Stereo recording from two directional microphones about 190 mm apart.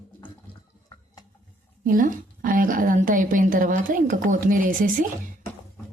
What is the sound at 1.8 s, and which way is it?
A woman's voice, 45° right (ahead or behind).